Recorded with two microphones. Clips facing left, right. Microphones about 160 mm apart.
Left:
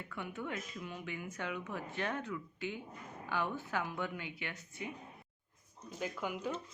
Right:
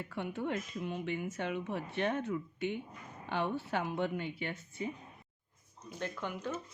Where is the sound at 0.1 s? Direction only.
30° right (ahead or behind).